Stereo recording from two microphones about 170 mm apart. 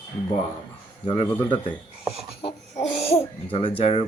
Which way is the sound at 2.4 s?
35° left (ahead or behind).